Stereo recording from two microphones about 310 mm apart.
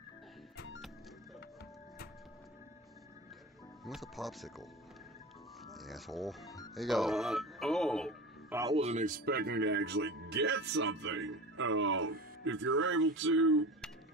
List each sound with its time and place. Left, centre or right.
3.8 s speech: centre
5.7 s a man's voice: centre; by 13.7 s right